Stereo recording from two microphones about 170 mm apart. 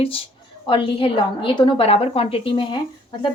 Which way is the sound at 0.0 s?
35° left (ahead or behind).